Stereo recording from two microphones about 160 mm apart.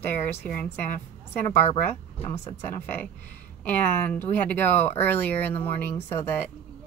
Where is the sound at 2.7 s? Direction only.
15° left (ahead or behind).